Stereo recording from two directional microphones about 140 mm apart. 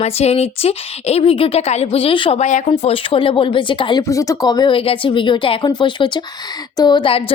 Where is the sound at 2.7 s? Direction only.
40° left (ahead or behind).